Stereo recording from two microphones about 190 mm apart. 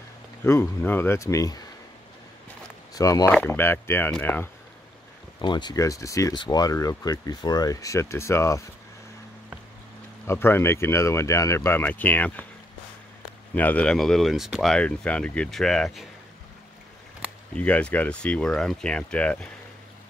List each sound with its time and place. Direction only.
0.4 s speech: 10° left (ahead or behind)
2.9 s speech: 20° left (ahead or behind)
5.4 s speech: 25° left (ahead or behind)
10.2 s speech: 10° left (ahead or behind)
13.6 s speech: 10° left (ahead or behind)
17.6 s speech: 5° left (ahead or behind)